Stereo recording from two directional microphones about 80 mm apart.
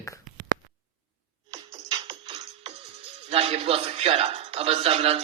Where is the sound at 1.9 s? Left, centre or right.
Right.